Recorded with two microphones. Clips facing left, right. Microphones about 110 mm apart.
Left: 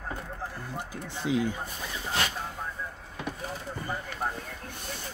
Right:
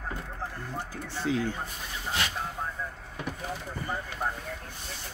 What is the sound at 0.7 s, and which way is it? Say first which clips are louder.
Speech: right 3 dB; 15° left (ahead or behind).